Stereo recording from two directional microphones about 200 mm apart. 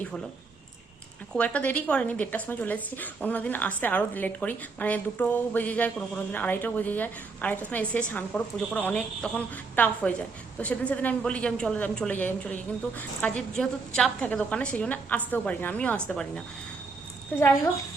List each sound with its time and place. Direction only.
1.4 s a woman's voice: 5° left (ahead or behind)